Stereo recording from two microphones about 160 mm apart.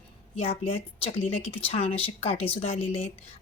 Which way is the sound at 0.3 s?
35° left (ahead or behind).